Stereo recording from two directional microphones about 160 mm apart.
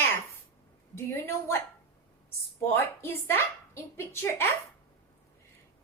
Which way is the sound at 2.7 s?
15° left (ahead or behind).